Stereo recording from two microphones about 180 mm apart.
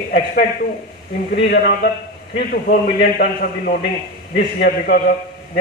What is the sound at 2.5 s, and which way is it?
A man's voice, 55° left (ahead or behind).